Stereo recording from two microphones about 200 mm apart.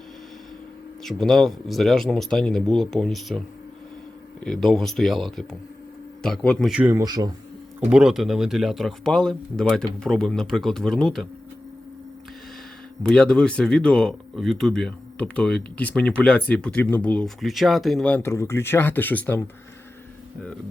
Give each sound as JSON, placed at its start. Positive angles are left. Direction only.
{"t": 1.0, "sound": "speech", "side_deg": 0}
{"t": 7.0, "sound": "a man's voice", "side_deg": -20}
{"t": 7.9, "sound": "speech", "side_deg": -5}
{"t": 13.0, "sound": "speech", "side_deg": 5}